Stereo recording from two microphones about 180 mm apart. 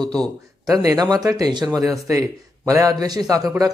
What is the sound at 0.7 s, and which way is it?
A man's voice, 20° right (ahead or behind).